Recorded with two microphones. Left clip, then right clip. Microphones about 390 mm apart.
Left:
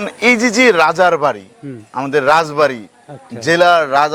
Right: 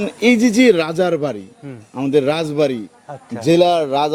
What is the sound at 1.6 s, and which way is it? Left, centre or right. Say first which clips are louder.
Speech: left 4 dB; right.